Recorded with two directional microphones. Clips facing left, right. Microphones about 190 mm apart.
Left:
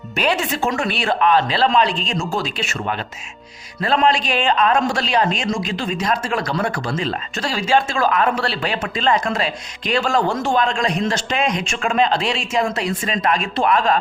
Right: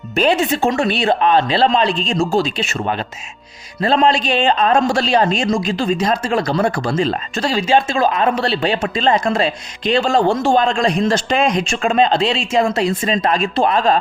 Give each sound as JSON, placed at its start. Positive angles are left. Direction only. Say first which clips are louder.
{"t": 0.2, "sound": "a man's voice", "louder": "right 5 dB", "side_deg": -25}
{"t": 3.8, "sound": "a man's voice", "louder": "right 3 dB", "side_deg": -30}